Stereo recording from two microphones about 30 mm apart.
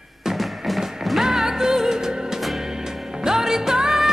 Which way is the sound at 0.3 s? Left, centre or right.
Centre.